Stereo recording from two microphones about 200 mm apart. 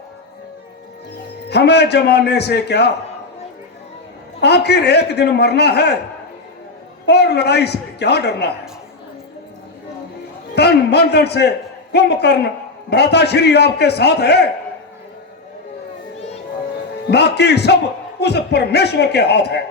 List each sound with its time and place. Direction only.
1.5 s a man's voice: 55° left (ahead or behind)
4.4 s a man's voice: 55° left (ahead or behind)
7.0 s a man's voice: 55° left (ahead or behind)
10.5 s a man's voice: 55° left (ahead or behind)
17.1 s a man's voice: 55° left (ahead or behind)